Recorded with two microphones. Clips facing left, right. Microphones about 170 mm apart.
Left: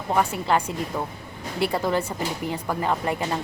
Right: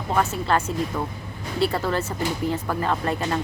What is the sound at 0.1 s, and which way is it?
Speech, 15° left (ahead or behind).